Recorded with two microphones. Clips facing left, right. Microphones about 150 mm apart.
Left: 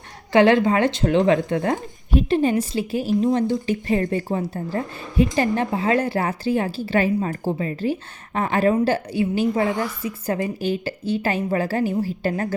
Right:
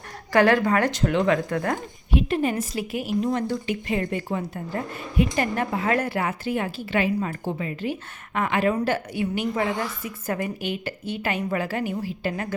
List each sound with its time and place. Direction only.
0.3 s a woman's voice: 25° left (ahead or behind)